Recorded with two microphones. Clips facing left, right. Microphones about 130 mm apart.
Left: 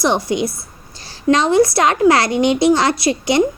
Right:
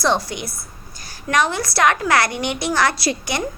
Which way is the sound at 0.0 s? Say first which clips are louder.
Left 4 dB; 20° left (ahead or behind).